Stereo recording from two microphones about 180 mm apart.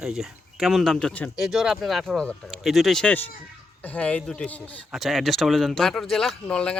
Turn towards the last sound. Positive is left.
turn(degrees=5)  # may be behind; listen again after turning